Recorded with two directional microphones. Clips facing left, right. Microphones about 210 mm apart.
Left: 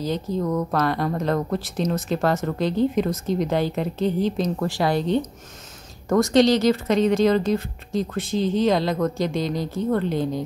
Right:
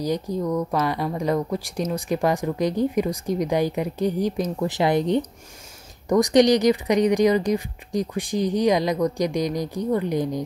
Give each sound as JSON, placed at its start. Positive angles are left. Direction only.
{"t": 0.0, "sound": "speech", "side_deg": -15}